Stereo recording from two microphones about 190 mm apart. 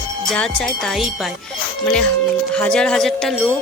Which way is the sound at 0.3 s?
Centre (ahead or behind).